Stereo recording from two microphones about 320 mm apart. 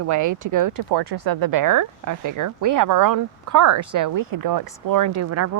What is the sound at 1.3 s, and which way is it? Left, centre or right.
A woman's voice, right.